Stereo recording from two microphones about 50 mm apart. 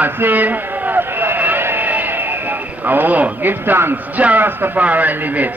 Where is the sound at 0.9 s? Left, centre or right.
Right.